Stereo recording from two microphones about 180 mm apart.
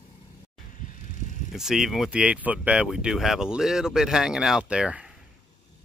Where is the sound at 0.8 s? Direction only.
50° left (ahead or behind).